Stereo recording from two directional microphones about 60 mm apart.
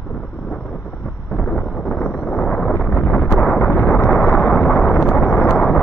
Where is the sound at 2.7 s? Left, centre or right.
Left.